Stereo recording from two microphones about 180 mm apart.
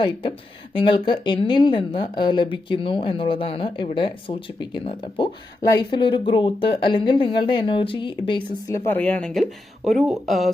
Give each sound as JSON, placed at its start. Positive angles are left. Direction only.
{"t": 0.0, "sound": "speech", "side_deg": 30}
{"t": 8.7, "sound": "speech", "side_deg": 10}